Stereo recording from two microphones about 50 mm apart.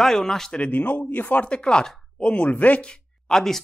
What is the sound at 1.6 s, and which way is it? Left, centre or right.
Speech, centre.